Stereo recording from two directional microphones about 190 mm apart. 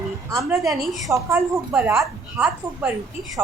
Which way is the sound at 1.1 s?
15° right (ahead or behind).